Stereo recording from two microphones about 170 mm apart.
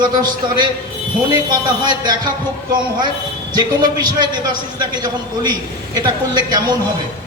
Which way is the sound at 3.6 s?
25° right (ahead or behind).